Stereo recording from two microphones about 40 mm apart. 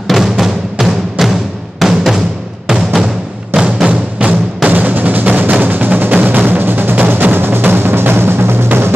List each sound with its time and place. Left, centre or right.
0.1 s music: centre
3.8 s music: right
4.6 s music: right
7.3 s music: right